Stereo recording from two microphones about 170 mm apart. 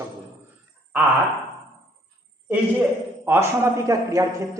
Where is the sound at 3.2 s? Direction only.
15° right (ahead or behind).